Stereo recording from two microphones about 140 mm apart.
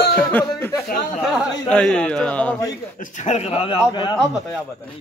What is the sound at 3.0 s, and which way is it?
Speech, 60° left (ahead or behind).